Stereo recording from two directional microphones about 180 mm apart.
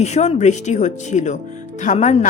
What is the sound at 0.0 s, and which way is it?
A woman's voice, 40° left (ahead or behind).